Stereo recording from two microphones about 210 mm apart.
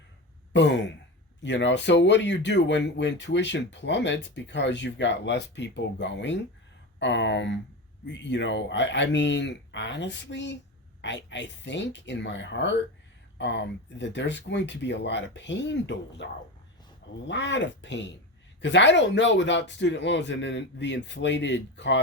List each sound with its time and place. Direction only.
1.4 s speech: 60° left (ahead or behind)